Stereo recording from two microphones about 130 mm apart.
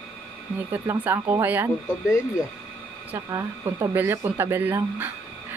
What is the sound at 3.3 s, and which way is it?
Speech, 25° right (ahead or behind).